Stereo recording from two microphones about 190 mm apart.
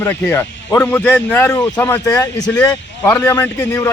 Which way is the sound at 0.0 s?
10° left (ahead or behind).